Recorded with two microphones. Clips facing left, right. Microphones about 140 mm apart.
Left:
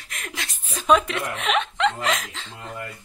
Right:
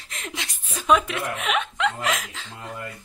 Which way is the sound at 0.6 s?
10° right (ahead or behind).